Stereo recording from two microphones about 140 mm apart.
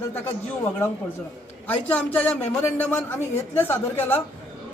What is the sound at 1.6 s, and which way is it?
Speech, 10° left (ahead or behind).